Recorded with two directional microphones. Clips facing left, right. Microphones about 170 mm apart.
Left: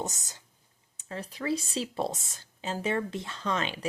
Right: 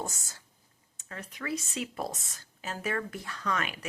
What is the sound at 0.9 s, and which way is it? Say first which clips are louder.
Speech: left 5 dB; 30° left (ahead or behind).